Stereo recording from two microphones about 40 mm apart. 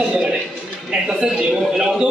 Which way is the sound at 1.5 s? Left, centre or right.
Centre.